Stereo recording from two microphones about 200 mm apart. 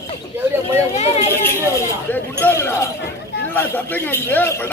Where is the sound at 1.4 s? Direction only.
10° left (ahead or behind).